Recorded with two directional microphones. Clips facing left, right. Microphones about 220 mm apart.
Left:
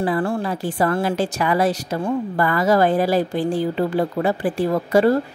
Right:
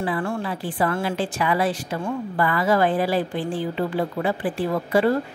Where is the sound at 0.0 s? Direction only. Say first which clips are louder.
Left 4 dB; 35° left (ahead or behind).